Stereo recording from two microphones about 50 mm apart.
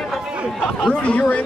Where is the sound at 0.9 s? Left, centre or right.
Left.